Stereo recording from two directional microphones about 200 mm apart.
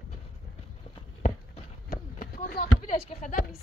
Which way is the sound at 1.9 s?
45° left (ahead or behind).